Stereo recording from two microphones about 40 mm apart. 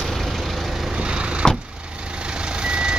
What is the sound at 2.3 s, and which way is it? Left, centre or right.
Reversing beeps, right.